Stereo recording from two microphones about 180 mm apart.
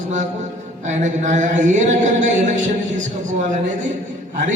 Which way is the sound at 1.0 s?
40° right (ahead or behind).